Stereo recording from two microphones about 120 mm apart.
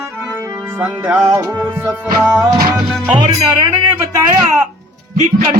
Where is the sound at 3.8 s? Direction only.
25° right (ahead or behind).